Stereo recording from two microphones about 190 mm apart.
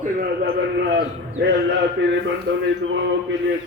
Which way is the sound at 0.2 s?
55° right (ahead or behind).